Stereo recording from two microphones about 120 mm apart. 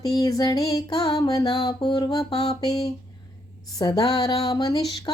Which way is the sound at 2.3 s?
55° left (ahead or behind).